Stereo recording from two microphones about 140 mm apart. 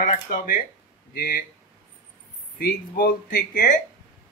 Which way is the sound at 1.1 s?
90° left.